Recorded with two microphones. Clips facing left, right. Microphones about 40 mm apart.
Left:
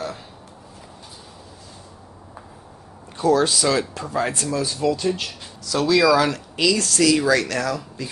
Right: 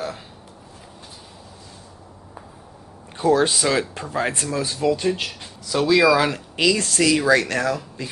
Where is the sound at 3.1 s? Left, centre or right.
Right.